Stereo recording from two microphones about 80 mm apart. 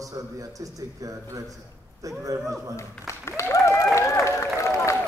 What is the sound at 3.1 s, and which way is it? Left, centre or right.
Applause, left.